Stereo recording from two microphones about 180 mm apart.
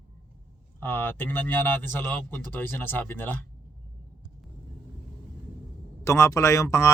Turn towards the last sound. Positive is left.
turn(degrees=15)  # may be behind; listen again after turning